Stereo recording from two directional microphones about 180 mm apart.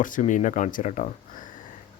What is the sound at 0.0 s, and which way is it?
A man's voice, 45° left (ahead or behind).